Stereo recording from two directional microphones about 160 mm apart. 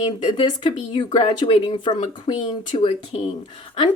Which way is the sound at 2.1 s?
30° left (ahead or behind).